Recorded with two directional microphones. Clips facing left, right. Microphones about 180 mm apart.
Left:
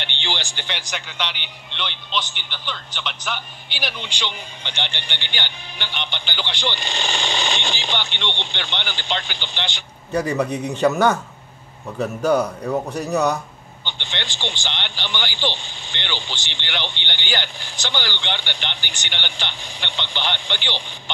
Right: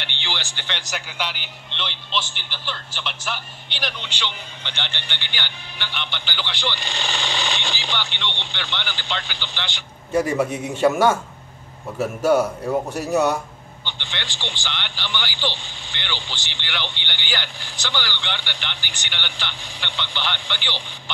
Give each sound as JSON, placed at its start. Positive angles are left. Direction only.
{"t": 0.0, "sound": "speech", "side_deg": 20}
{"t": 0.8, "sound": "a man's voice", "side_deg": -5}
{"t": 10.1, "sound": "a man's voice", "side_deg": -5}
{"t": 13.8, "sound": "a man's voice", "side_deg": 20}